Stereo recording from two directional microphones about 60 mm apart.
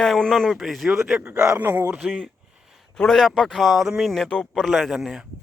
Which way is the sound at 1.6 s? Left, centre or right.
Right.